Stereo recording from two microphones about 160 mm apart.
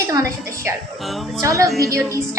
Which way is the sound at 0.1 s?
20° right (ahead or behind).